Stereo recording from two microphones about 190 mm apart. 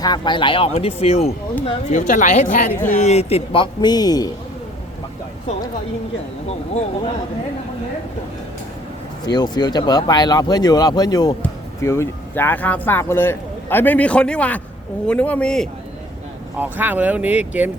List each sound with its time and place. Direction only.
0.0 s speech: 25° left (ahead or behind)
9.2 s speech: 20° left (ahead or behind); by 15.7 s 5° left (ahead or behind)
16.6 s speech: 10° right (ahead or behind)